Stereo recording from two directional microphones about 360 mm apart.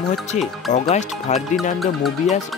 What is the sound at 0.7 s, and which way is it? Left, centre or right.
Speech, centre.